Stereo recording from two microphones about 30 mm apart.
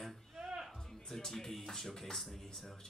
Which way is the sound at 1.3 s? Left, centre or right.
Centre.